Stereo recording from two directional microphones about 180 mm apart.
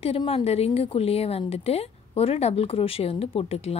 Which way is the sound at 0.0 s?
35° left (ahead or behind).